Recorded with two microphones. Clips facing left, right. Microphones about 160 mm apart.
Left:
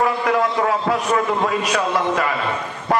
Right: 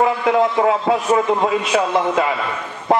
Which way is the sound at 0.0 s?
25° right (ahead or behind).